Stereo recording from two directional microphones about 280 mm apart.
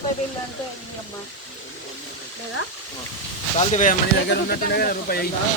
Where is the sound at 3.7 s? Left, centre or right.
Left.